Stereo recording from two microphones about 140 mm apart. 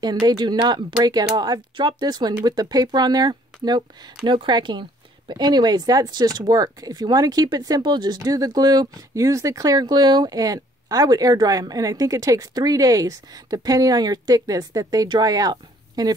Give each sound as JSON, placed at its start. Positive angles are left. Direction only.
{"t": 0.0, "sound": "speech", "side_deg": -30}